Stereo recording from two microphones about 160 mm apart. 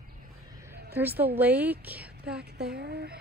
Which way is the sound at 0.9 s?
10° right (ahead or behind).